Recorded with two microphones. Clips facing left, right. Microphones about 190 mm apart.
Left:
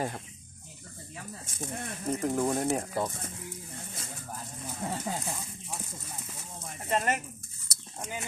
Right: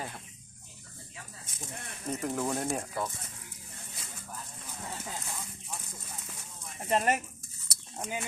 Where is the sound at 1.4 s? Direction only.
50° left (ahead or behind).